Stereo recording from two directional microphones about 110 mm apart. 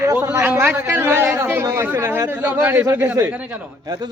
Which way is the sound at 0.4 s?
20° right (ahead or behind).